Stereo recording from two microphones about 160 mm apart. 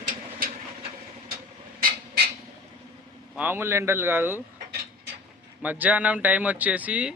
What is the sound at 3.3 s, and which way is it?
Speech, 10° right (ahead or behind).